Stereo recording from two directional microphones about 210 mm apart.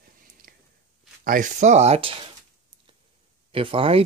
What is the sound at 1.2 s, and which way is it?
Speech, 40° right (ahead or behind).